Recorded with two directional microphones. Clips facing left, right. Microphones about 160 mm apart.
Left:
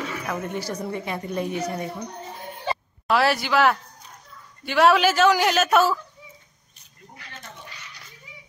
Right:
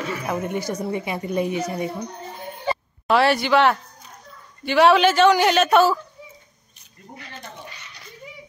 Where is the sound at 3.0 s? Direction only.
Centre (ahead or behind).